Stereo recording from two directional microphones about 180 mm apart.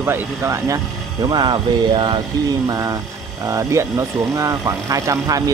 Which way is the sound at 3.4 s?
15° right (ahead or behind).